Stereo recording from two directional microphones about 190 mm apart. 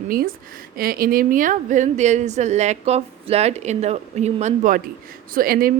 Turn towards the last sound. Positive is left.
turn(degrees=-50)  # may be behind; listen again after turning